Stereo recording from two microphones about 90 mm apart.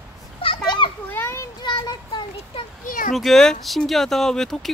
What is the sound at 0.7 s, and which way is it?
Children playing, 65° left (ahead or behind).